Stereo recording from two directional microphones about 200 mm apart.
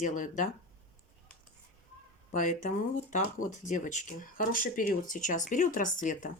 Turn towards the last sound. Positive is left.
turn(degrees=40)  # may be behind; listen again after turning